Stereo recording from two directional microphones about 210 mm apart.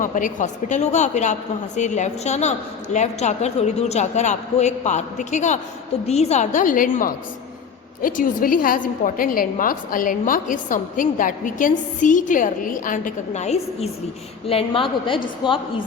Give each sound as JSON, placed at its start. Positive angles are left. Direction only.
{"t": 0.0, "sound": "a woman's voice", "side_deg": 40}
{"t": 15.4, "sound": "a woman's voice", "side_deg": -5}